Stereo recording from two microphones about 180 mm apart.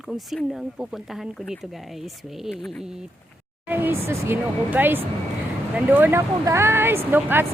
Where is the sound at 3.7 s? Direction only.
10° right (ahead or behind).